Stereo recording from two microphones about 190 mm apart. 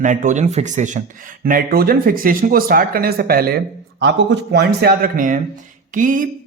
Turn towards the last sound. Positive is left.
turn(degrees=-45)  # may be behind; listen again after turning